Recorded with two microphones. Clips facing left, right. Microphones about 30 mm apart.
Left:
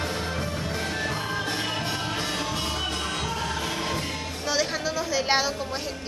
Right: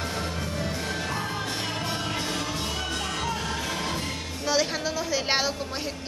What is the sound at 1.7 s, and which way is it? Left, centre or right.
Music, left.